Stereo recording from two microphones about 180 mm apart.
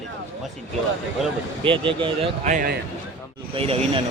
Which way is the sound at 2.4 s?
45° right (ahead or behind).